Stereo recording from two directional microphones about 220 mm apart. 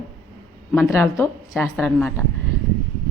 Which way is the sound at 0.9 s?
15° left (ahead or behind).